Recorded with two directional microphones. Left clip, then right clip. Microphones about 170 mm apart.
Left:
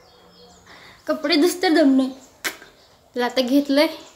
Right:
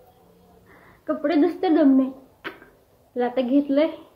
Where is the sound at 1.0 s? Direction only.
20° left (ahead or behind).